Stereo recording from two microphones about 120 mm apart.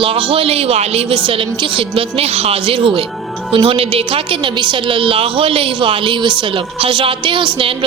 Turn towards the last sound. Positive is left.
turn(degrees=-45)  # may be behind; listen again after turning